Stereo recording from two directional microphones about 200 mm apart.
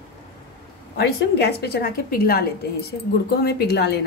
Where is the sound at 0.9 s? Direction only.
55° left (ahead or behind).